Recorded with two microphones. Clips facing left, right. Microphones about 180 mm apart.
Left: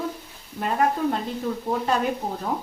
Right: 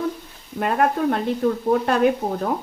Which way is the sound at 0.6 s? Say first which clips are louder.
Right 3 dB; 60° right (ahead or behind).